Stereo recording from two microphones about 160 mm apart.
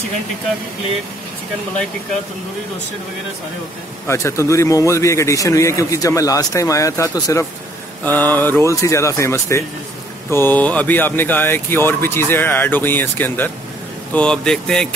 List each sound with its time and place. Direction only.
4.1 s a man's voice: 15° left (ahead or behind)